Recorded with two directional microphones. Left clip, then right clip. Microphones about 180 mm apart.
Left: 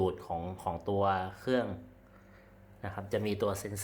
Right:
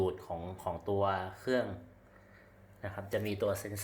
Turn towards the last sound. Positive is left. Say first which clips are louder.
# left 1 dB
turn(degrees=20)  # may be behind; listen again after turning